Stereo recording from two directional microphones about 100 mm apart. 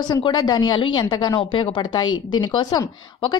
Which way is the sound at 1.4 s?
55° left (ahead or behind).